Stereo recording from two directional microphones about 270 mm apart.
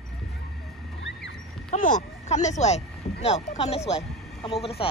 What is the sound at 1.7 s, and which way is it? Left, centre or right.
Speech, left.